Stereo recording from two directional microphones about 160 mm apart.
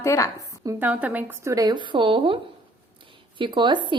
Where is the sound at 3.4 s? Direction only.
30° right (ahead or behind).